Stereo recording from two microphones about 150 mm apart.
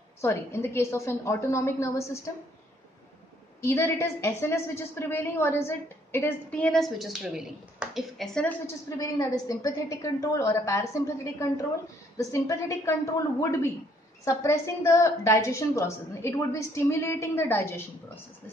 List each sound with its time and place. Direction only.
0.2 s a woman's voice: 15° left (ahead or behind)
3.6 s a woman's voice: 20° left (ahead or behind)
8.6 s a woman's voice: 20° left (ahead or behind)